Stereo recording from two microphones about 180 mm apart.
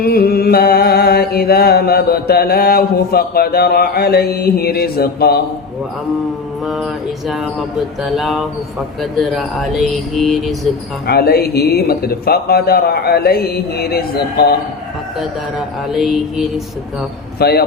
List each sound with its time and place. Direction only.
0.0 s mantra: 55° left (ahead or behind)
8.0 s mantra: centre (ahead or behind)
11.0 s mantra: 60° left (ahead or behind)
15.9 s mantra: centre (ahead or behind)
17.4 s mantra: 60° left (ahead or behind)